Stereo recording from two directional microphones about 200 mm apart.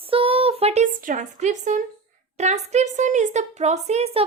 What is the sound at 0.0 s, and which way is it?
A woman's voice, 30° right (ahead or behind).